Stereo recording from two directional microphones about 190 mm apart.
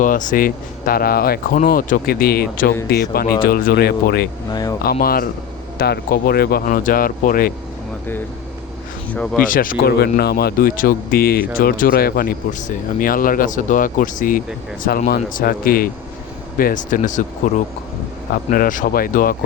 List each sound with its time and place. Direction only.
0.0 s speech: 45° left (ahead or behind)
4.5 s speech: 20° left (ahead or behind)
4.8 s speech: 50° left (ahead or behind)
9.0 s speech: 5° left (ahead or behind)
9.4 s speech: 45° left (ahead or behind)
18.5 s speech: 45° left (ahead or behind)